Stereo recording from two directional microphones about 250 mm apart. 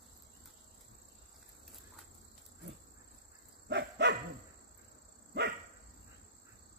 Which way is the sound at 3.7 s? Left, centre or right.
Right.